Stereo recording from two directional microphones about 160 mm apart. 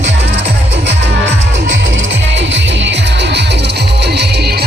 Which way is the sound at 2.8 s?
90° right.